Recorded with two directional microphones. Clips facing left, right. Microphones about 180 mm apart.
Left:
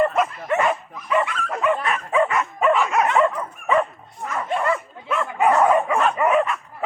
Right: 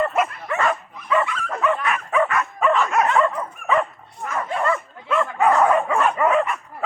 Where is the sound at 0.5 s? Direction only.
20° left (ahead or behind).